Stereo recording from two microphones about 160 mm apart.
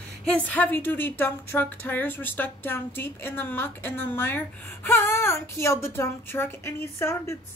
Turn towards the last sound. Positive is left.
turn(degrees=15)  # may be behind; listen again after turning